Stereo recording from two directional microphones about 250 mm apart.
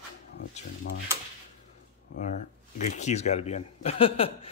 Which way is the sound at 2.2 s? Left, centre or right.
Left.